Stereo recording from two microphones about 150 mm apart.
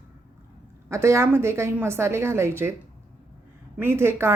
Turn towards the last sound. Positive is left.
turn(degrees=-15)  # may be behind; listen again after turning